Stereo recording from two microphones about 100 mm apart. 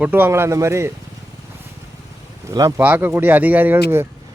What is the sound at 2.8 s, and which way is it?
Speech, 20° right (ahead or behind).